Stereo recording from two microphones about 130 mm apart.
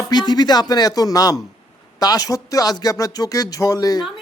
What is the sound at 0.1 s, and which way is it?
Speech, 35° left (ahead or behind).